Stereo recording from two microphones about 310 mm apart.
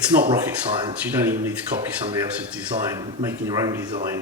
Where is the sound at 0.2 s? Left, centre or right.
Centre.